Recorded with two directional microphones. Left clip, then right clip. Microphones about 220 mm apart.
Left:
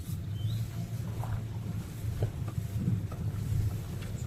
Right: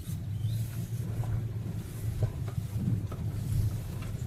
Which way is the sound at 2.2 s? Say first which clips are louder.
Left 1 dB; 45° left (ahead or behind).